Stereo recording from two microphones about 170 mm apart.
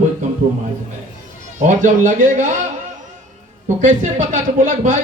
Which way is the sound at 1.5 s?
45° right (ahead or behind).